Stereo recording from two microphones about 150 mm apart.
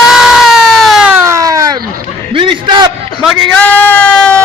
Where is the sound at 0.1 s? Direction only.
Centre (ahead or behind).